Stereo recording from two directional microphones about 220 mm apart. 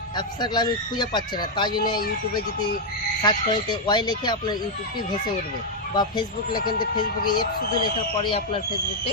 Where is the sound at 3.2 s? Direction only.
20° left (ahead or behind).